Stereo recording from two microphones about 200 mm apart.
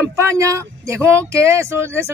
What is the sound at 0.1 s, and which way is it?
Speech, 15° right (ahead or behind).